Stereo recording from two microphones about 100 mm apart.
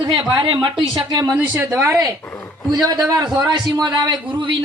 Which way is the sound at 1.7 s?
30° right (ahead or behind).